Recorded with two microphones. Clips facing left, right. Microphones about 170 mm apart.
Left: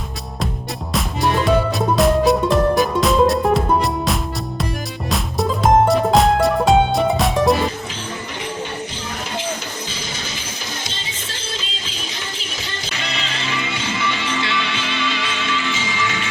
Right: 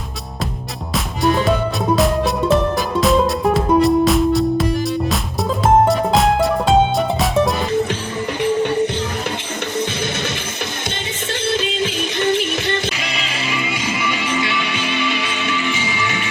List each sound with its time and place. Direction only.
0.9 s music: centre (ahead or behind)
11.5 s music: 60° right (ahead or behind)
13.0 s music: 10° right (ahead or behind)